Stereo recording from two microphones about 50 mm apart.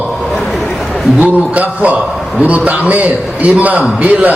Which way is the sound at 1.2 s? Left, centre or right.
Right.